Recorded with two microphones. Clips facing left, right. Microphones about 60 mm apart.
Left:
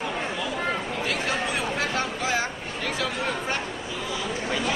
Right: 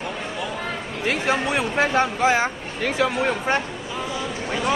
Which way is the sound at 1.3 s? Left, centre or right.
Right.